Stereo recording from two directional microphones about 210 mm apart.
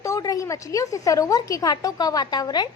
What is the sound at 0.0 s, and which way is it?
A woman's voice, 15° left (ahead or behind).